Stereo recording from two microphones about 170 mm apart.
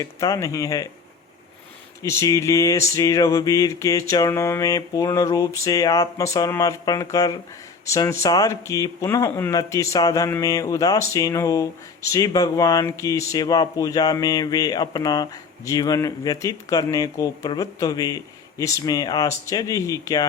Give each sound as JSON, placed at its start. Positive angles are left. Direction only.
{"t": 0.0, "sound": "speech", "side_deg": 20}
{"t": 2.0, "sound": "speech", "side_deg": 20}